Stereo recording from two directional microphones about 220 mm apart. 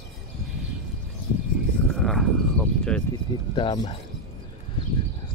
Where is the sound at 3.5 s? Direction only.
20° left (ahead or behind).